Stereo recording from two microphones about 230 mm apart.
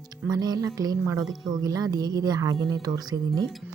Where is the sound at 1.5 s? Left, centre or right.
Centre.